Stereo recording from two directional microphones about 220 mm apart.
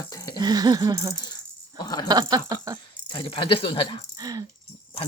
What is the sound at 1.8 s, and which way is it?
Speech, 20° left (ahead or behind).